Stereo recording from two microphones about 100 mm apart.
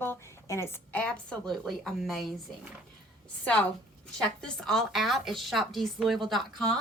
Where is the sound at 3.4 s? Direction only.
10° left (ahead or behind).